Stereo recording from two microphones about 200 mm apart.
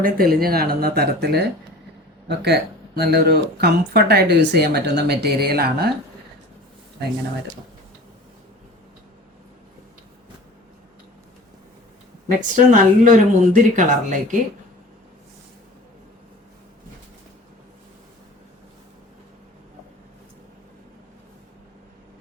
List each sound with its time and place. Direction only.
0.0 s speech: 50° right (ahead or behind)
12.5 s speech: 40° right (ahead or behind)